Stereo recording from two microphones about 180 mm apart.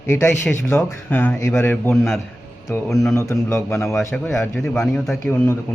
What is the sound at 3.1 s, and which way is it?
Speech, 15° left (ahead or behind).